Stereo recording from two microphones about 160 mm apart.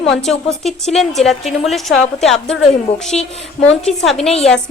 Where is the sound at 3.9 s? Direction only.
5° left (ahead or behind).